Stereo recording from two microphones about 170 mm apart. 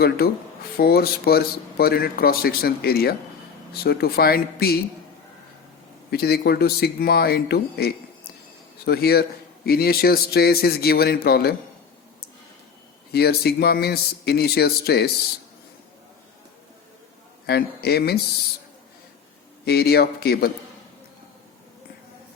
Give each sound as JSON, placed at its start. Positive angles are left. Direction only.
{"t": 0.2, "sound": "speech", "side_deg": 65}
{"t": 6.1, "sound": "speech", "side_deg": 65}
{"t": 13.1, "sound": "speech", "side_deg": 70}
{"t": 17.4, "sound": "speech", "side_deg": 70}
{"t": 19.6, "sound": "speech", "side_deg": 70}